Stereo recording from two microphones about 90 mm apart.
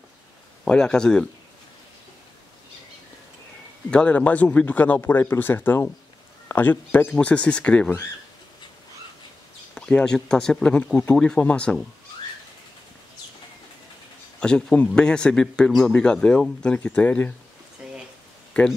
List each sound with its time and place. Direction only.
0.7 s speech: 10° left (ahead or behind)
3.9 s speech: 15° left (ahead or behind)
9.8 s speech: 10° left (ahead or behind)
14.4 s speech: 10° left (ahead or behind)
17.8 s a sound: centre (ahead or behind)